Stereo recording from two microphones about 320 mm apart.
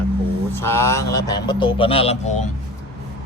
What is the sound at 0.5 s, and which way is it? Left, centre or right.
Speech, centre.